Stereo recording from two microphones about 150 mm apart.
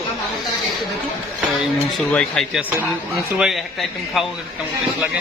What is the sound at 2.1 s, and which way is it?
Speech, 5° left (ahead or behind).